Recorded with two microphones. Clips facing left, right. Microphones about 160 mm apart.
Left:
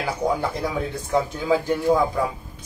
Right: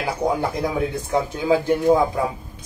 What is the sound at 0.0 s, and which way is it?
Speech, 15° right (ahead or behind).